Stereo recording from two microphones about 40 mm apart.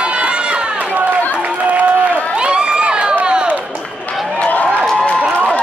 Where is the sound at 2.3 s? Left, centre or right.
Right.